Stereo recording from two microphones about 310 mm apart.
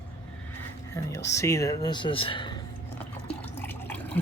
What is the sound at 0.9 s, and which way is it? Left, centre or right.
Speech, centre.